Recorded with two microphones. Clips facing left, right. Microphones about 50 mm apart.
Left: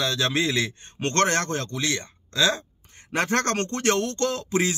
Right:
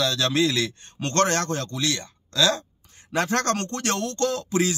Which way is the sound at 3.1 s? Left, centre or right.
Left.